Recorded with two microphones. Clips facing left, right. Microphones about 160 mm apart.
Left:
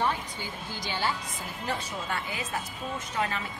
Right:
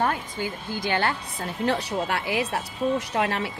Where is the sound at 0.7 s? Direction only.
55° right (ahead or behind).